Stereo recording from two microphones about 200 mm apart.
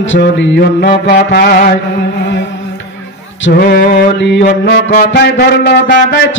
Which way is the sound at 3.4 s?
50° left (ahead or behind).